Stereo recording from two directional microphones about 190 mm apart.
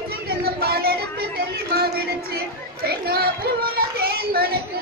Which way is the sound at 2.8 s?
55° right (ahead or behind).